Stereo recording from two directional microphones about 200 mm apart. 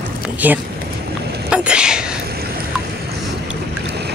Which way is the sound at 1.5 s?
5° right (ahead or behind).